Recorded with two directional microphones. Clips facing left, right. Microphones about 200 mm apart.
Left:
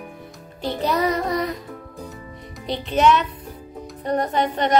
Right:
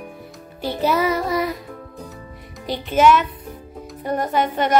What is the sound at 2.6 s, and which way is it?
Music, centre (ahead or behind).